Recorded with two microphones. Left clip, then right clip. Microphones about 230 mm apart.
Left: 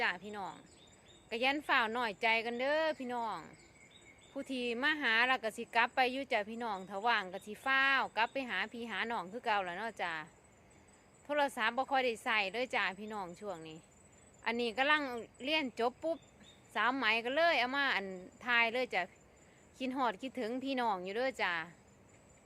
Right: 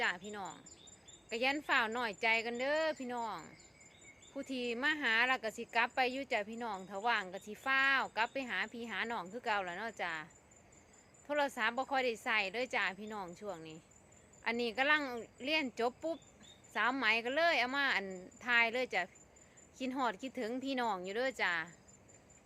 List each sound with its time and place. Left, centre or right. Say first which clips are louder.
0.0 s a woman's voice: left 1 dB; centre
11.3 s a woman's voice: left 1 dB; centre